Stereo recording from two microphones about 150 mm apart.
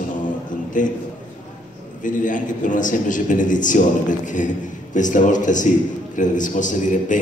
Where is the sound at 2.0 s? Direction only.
60° left (ahead or behind).